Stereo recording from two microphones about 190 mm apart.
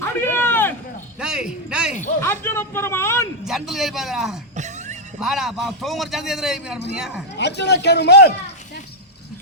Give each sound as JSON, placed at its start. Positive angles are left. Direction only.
{"t": 0.0, "sound": "a sound", "side_deg": 10}
{"t": 1.2, "sound": "a man's voice", "side_deg": -5}
{"t": 2.2, "sound": "speech", "side_deg": 10}
{"t": 3.4, "sound": "a man's voice", "side_deg": 0}
{"t": 4.5, "sound": "music", "side_deg": -40}
{"t": 5.2, "sound": "a man's voice", "side_deg": 0}
{"t": 7.3, "sound": "a man's voice", "side_deg": 65}